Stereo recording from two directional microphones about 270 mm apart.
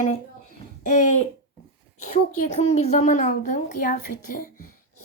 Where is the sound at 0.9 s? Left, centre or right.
Left.